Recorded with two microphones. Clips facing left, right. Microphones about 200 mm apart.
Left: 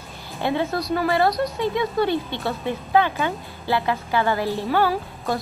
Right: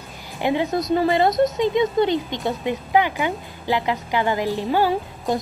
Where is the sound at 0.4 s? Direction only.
15° right (ahead or behind).